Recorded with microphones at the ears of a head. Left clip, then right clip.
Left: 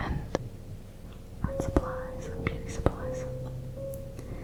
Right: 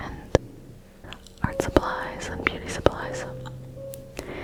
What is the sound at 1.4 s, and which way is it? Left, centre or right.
Whispering, right.